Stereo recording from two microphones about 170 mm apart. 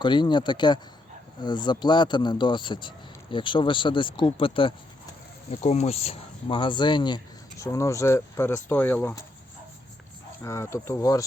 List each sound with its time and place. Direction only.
0.0 s speech: 25° left (ahead or behind); by 9.2 s 10° left (ahead or behind)
10.4 s speech: 15° left (ahead or behind)